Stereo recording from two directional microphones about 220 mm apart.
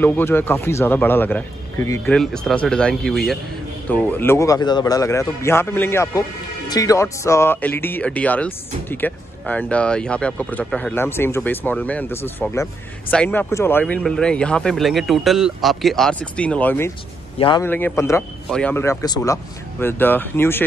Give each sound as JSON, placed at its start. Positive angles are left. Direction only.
{"t": 0.0, "sound": "speech", "side_deg": 10}
{"t": 17.4, "sound": "a man's voice", "side_deg": 20}
{"t": 17.6, "sound": "speech", "side_deg": 10}